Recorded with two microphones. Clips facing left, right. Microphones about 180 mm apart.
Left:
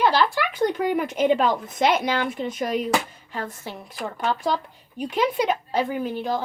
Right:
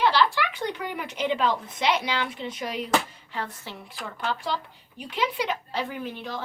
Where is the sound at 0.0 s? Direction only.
45° left (ahead or behind).